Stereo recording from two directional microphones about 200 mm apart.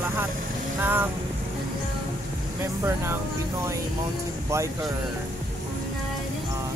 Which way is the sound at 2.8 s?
15° right (ahead or behind).